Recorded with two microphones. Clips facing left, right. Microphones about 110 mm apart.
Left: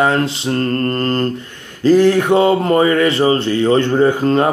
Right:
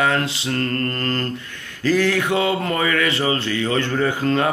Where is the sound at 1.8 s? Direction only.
25° left (ahead or behind).